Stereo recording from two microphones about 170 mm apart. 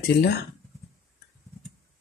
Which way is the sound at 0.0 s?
70° left (ahead or behind).